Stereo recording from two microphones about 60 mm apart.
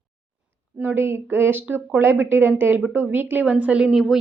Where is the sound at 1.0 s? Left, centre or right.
Right.